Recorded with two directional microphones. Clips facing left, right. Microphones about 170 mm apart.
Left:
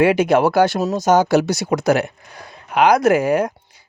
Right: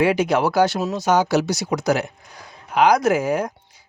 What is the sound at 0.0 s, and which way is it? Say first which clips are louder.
Speech: left 4 dB; 55° left (ahead or behind).